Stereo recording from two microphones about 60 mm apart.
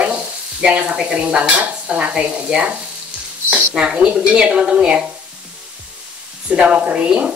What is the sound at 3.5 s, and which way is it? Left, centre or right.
Speech, centre.